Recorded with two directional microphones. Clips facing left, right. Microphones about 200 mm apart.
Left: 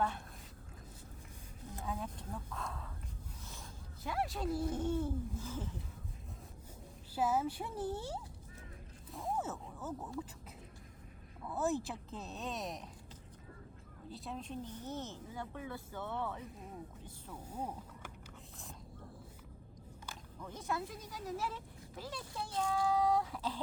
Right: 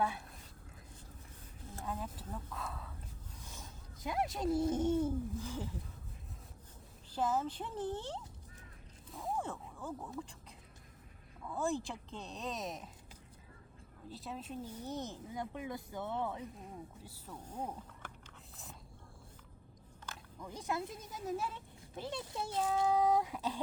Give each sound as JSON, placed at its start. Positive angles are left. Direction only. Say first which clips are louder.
{"t": 1.8, "sound": "speech", "louder": "even", "side_deg": 0}
{"t": 3.4, "sound": "speech", "louder": "left 1 dB", "side_deg": -15}
{"t": 7.1, "sound": "speech", "louder": "left 1 dB", "side_deg": 10}
{"t": 11.4, "sound": "speech", "louder": "left 1 dB", "side_deg": 5}
{"t": 14.1, "sound": "speech", "louder": "even", "side_deg": 0}
{"t": 17.3, "sound": "speech", "louder": "even", "side_deg": 10}
{"t": 20.4, "sound": "speech", "louder": "right 1 dB", "side_deg": -15}